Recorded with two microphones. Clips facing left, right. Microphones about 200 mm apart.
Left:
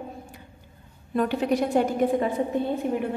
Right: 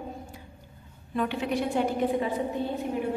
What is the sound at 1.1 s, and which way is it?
Speech, 45° left (ahead or behind).